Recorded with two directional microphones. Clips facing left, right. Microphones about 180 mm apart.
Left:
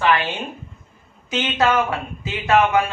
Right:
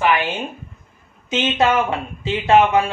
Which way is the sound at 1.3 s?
25° right (ahead or behind).